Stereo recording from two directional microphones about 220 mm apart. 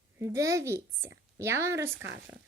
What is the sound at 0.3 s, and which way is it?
A woman's voice, 15° right (ahead or behind).